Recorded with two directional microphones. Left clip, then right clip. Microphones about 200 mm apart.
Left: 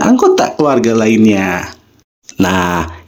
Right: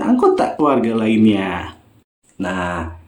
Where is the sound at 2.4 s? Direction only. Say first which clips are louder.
Left 9 dB; 45° left (ahead or behind).